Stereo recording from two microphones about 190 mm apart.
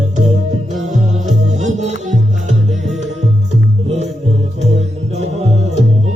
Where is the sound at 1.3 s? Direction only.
35° right (ahead or behind).